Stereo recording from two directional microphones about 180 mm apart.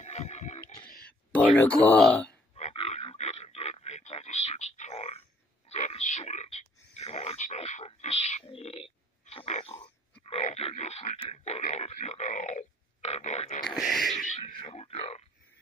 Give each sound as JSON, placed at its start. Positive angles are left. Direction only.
{"t": 0.0, "sound": "pig", "side_deg": 40}
{"t": 1.5, "sound": "speech", "side_deg": 10}
{"t": 2.5, "sound": "a sound", "side_deg": 35}
{"t": 7.0, "sound": "grunt", "side_deg": 35}
{"t": 9.2, "sound": "pig", "side_deg": 35}
{"t": 10.3, "sound": "a sound", "side_deg": 35}
{"t": 13.7, "sound": "speech", "side_deg": 0}
{"t": 14.3, "sound": "speech", "side_deg": 35}